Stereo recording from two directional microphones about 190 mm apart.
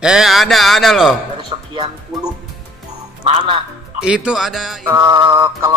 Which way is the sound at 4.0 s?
5° right (ahead or behind).